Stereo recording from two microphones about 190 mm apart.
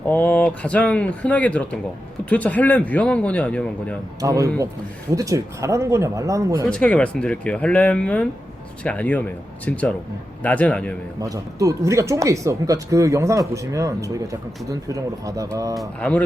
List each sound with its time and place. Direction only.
0.1 s speech: 10° left (ahead or behind)
4.2 s speech: 15° right (ahead or behind)
6.7 s speech: 5° left (ahead or behind)
11.2 s speech: 15° right (ahead or behind)
15.7 s speech: 5° left (ahead or behind)